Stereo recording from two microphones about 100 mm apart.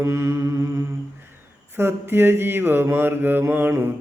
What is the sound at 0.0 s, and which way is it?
Mantra, 30° right (ahead or behind).